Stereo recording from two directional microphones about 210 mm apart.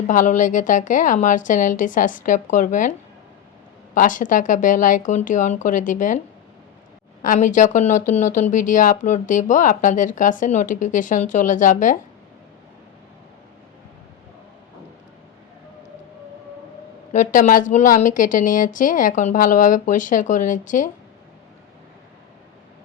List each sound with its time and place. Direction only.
0.1 s speech: 35° left (ahead or behind)
3.9 s speech: 40° left (ahead or behind)
17.1 s speech: 35° left (ahead or behind)